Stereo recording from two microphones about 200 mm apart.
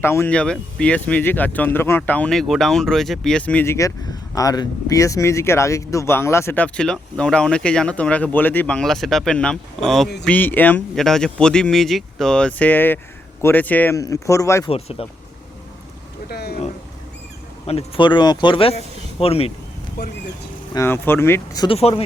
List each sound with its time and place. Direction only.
0.0 s speech: 10° left (ahead or behind)
14.7 s speech: 30° left (ahead or behind)
16.3 s speech: 50° left (ahead or behind)
17.7 s speech: 30° left (ahead or behind)
20.7 s speech: 10° left (ahead or behind)
21.8 s speech: 30° left (ahead or behind)